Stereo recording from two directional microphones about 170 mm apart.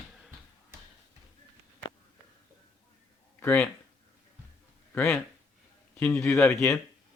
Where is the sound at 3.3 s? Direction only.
10° left (ahead or behind).